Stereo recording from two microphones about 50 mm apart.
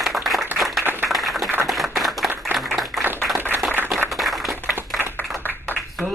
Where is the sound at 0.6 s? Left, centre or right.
Centre.